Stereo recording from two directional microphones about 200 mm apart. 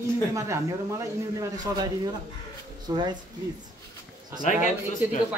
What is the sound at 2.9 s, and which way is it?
Speech, 20° right (ahead or behind).